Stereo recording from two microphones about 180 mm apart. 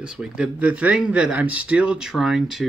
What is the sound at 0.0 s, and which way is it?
Speech, 5° right (ahead or behind).